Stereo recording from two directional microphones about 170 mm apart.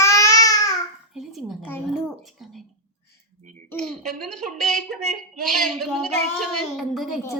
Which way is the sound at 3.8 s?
Centre (ahead or behind).